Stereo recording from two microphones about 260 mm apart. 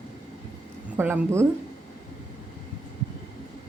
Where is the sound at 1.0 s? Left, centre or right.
Centre.